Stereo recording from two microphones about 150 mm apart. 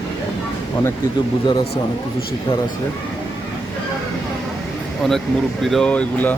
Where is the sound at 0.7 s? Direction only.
25° left (ahead or behind).